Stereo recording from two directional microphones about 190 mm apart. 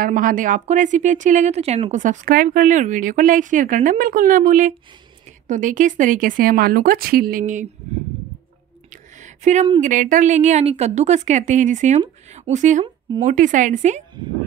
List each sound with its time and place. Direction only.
0.0 s speech: 45° right (ahead or behind)
8.9 s a sound: 40° right (ahead or behind)
9.8 s a woman's voice: 40° right (ahead or behind)